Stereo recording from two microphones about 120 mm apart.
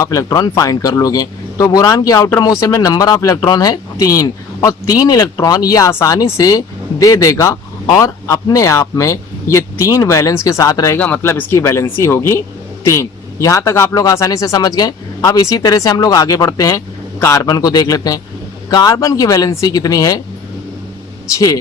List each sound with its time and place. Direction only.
0.0 s speech: 30° left (ahead or behind)
10.9 s speech: 15° left (ahead or behind); by 20.2 s 30° left (ahead or behind)
21.3 s speech: 30° left (ahead or behind)